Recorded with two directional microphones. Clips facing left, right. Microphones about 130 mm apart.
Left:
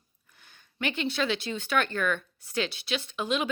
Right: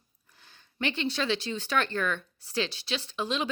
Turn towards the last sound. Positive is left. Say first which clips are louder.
# left 2 dB
turn(degrees=-35)  # may be behind; listen again after turning